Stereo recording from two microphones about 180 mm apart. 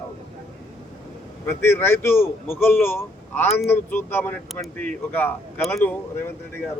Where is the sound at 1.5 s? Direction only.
15° left (ahead or behind).